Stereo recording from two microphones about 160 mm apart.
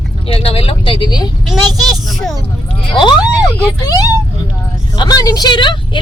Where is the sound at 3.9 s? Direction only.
20° left (ahead or behind).